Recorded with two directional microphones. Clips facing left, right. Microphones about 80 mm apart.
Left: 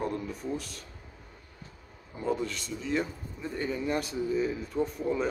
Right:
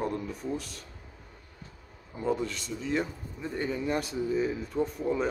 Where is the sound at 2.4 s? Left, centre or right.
Centre.